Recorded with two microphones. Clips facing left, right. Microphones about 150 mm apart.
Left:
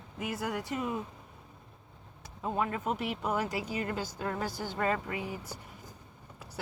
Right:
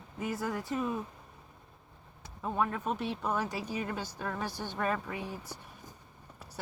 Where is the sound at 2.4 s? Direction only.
80° left.